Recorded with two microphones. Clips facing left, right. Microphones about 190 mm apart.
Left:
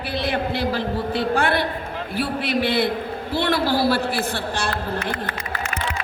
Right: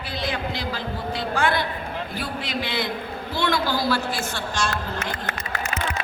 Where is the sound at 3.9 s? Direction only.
60° left (ahead or behind).